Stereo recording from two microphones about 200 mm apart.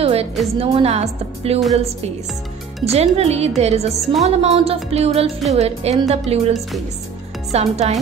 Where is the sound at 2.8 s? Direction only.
30° right (ahead or behind).